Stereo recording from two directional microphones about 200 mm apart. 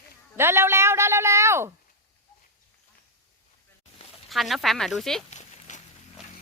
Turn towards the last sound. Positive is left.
turn(degrees=35)  # may be behind; listen again after turning